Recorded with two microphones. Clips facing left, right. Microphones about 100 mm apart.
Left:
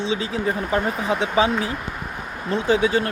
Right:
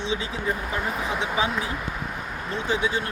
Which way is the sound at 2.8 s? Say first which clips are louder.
Left 6 dB; 90° left.